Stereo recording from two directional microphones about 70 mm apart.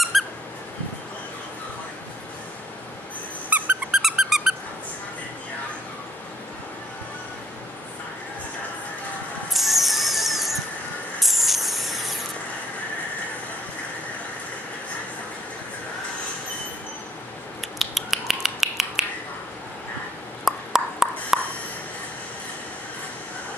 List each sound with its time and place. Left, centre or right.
0.1 s squeak: centre
3.4 s squeak: right
3.9 s a sound: centre
9.5 s music: centre
11.1 s spray: centre
17.6 s finger snapping: centre
20.4 s a sound: centre